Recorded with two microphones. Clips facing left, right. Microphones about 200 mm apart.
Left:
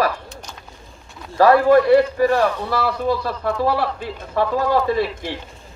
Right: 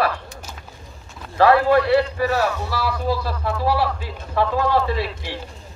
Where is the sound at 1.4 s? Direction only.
45° left (ahead or behind).